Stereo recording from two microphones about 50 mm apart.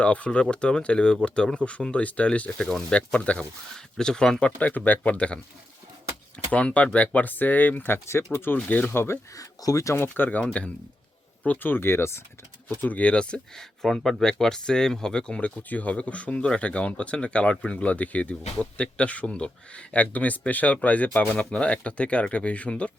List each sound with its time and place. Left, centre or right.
0.0 s speech: left
3.9 s speech: centre
4.5 s speech: left
6.5 s speech: left
7.9 s speech: left
8.5 s speech: left
8.9 s speech: left
9.7 s speech: left
10.6 s speech: left
11.4 s speech: left
12.6 s speech: left
13.6 s speech: centre; by 22.9 s left